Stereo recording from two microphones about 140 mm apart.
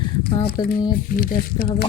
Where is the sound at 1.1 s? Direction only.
90° left.